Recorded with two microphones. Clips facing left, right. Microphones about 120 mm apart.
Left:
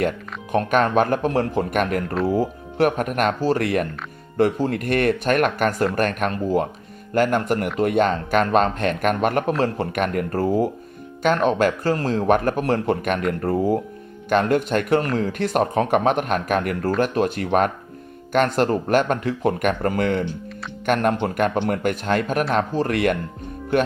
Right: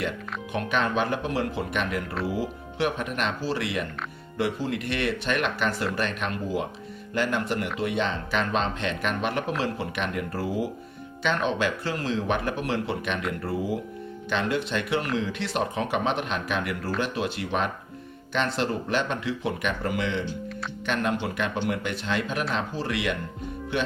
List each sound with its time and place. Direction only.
0.5 s speech: 45° left (ahead or behind)